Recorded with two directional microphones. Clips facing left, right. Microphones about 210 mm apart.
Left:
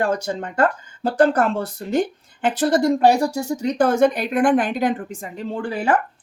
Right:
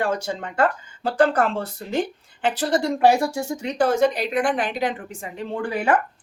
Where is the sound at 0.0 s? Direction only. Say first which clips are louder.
Left 3 dB; 40° left (ahead or behind).